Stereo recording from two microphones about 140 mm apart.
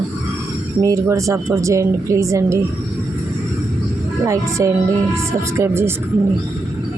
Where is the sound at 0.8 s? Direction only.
25° right (ahead or behind).